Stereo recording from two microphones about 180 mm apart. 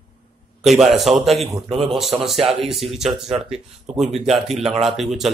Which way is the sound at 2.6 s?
Centre (ahead or behind).